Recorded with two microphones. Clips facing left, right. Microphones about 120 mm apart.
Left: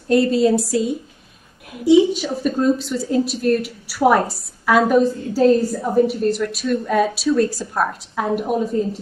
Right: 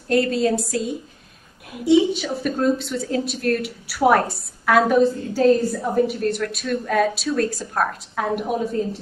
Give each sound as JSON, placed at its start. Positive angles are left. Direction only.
{"t": 0.1, "sound": "a woman's voice", "side_deg": 0}